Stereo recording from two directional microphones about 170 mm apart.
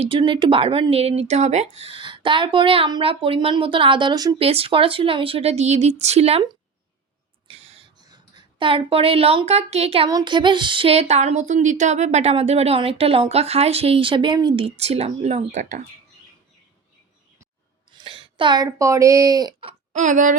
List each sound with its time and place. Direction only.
0.0 s a woman's voice: 30° right (ahead or behind)
4.4 s a woman's voice: 35° right (ahead or behind)
7.4 s a sound: 35° right (ahead or behind)
8.0 s speech: 25° right (ahead or behind)
10.1 s a sound: 25° right (ahead or behind)
11.1 s a woman's voice: 40° right (ahead or behind)
17.9 s speech: 30° right (ahead or behind)
19.9 s speech: 45° right (ahead or behind)